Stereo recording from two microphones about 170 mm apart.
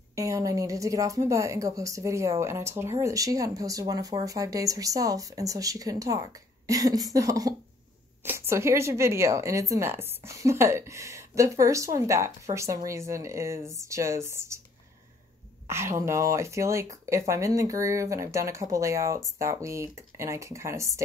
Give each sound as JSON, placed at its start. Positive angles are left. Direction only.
{"t": 0.1, "sound": "speech", "side_deg": -20}
{"t": 15.6, "sound": "speech", "side_deg": -15}